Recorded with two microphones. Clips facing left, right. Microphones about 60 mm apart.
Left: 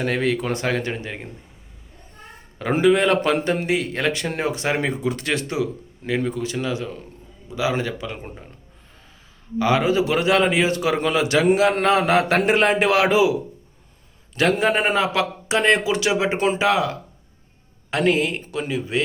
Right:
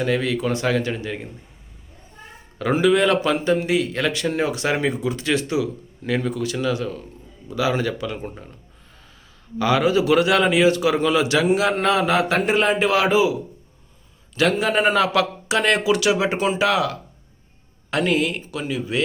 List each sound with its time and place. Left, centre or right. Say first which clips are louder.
0.0 s speech: even; left
2.7 s speech: even; left
3.4 s speech: right 2 dB; left
5.0 s speech: right 1 dB; left
6.1 s speech: even; centre
9.6 s speech: even; left
14.3 s speech: left 1 dB; left
14.7 s speech: right 2 dB; left
18.0 s speech: left 2 dB; left